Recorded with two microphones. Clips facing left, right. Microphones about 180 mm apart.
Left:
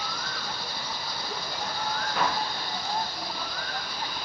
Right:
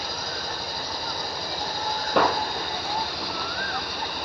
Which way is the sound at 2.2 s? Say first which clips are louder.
Right 8 dB; 65° right (ahead or behind).